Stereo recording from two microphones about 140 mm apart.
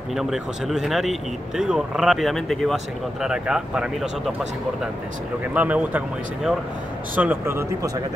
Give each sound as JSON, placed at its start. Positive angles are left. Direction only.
{"t": 0.1, "sound": "speech", "side_deg": 0}
{"t": 5.5, "sound": "speech", "side_deg": -10}